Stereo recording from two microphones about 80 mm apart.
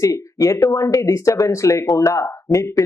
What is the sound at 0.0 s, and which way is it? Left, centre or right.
Speech, left.